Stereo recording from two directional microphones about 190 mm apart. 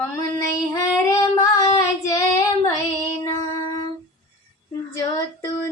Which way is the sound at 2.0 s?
15° left (ahead or behind).